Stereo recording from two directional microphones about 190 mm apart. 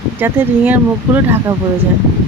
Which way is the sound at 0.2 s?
10° right (ahead or behind).